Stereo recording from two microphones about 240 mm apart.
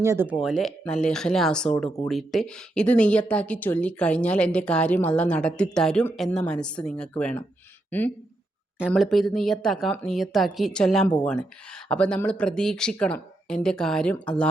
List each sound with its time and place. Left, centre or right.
0.0 s speech: centre
0.4 s speech: centre